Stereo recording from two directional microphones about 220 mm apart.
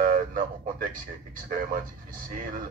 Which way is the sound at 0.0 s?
35° right (ahead or behind).